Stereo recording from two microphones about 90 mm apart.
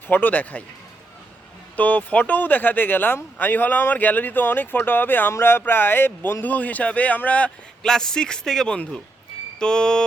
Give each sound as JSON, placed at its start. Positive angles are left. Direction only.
{"t": 0.1, "sound": "speech", "side_deg": 20}
{"t": 1.7, "sound": "speech", "side_deg": 20}